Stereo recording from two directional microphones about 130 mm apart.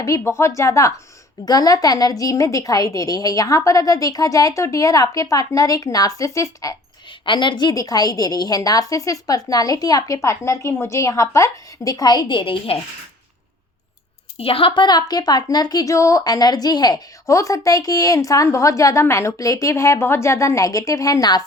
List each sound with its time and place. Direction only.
0.0 s a woman's voice: 25° left (ahead or behind)
7.3 s a woman's voice: 35° left (ahead or behind)
14.3 s a woman's voice: 45° left (ahead or behind)